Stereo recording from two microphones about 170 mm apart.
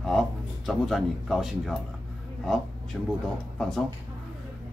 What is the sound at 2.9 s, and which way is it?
Speech, centre (ahead or behind).